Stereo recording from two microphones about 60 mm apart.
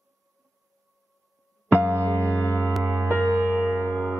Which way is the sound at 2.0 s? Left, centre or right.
Left.